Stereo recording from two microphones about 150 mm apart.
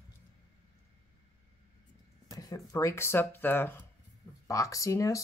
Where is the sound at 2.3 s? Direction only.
25° left (ahead or behind).